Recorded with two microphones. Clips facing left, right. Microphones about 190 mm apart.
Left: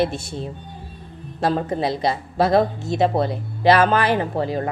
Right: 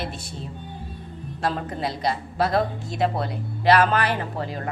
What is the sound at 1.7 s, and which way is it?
Speech, 25° left (ahead or behind).